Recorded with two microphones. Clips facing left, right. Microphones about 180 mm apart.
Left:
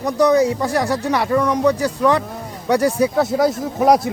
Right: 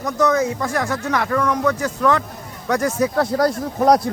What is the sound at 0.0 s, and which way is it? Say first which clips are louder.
Speech: left 4 dB; 35° left (ahead or behind).